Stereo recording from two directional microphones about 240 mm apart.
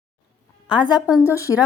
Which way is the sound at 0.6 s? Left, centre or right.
Centre.